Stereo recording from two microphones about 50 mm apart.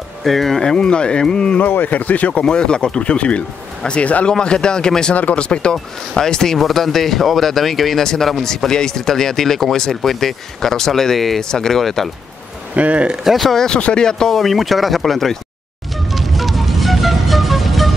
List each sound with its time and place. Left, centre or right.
0.2 s speech: centre
1.6 s speech: left
2.4 s speech: centre
4.3 s speech: centre
12.7 s speech: right
13.1 s speech: centre
13.7 s speech: centre
16.1 s music: centre